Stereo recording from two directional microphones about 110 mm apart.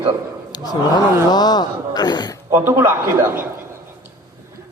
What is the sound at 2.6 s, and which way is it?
Speech, 20° right (ahead or behind).